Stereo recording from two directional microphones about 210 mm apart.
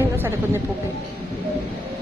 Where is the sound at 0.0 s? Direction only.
10° right (ahead or behind).